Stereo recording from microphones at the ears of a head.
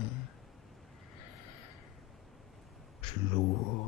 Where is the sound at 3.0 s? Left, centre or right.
Left.